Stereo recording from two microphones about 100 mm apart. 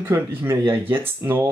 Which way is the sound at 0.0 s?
20° right (ahead or behind).